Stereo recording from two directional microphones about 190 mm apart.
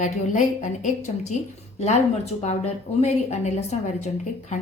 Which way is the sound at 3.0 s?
35° left (ahead or behind).